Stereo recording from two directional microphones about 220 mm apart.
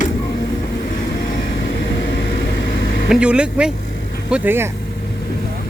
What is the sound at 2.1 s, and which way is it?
Vehicle, 55° left (ahead or behind).